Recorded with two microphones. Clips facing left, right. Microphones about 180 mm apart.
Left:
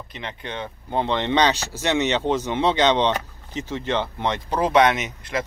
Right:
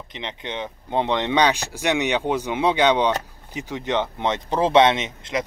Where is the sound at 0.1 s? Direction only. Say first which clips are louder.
Right 2 dB; 20° right (ahead or behind).